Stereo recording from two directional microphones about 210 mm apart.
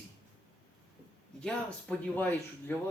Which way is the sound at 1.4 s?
5° left (ahead or behind).